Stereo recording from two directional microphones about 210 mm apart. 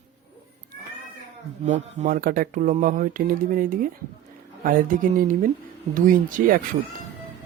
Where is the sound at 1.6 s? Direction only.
35° right (ahead or behind).